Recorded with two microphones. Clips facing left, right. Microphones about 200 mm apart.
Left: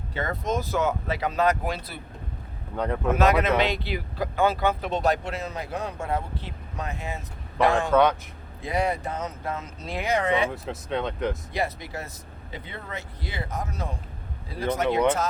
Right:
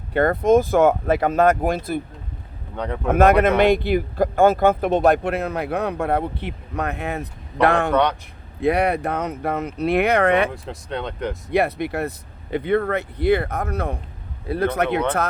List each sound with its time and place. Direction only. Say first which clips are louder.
0.1 s speech: right 12 dB; 55° right (ahead or behind)
2.7 s speech: even; centre (ahead or behind)
3.1 s speech: right 7 dB; 55° right (ahead or behind)
10.5 s speech: even; 5° left (ahead or behind)
11.5 s speech: right 9 dB; 60° right (ahead or behind)